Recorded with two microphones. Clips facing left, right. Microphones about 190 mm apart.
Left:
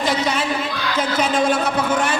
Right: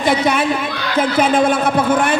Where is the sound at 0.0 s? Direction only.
55° right (ahead or behind).